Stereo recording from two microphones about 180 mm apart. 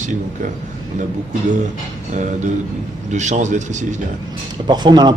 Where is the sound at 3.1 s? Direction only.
40° right (ahead or behind).